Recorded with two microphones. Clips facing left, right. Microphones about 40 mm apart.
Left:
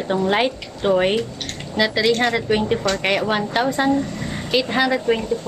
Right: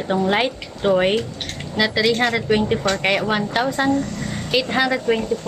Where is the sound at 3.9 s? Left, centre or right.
Centre.